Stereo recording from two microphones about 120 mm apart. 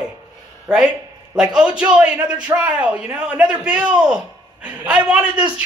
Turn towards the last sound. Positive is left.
turn(degrees=-10)  # may be behind; listen again after turning